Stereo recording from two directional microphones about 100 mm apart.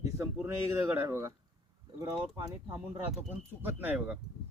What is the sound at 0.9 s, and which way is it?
Speech, 25° right (ahead or behind).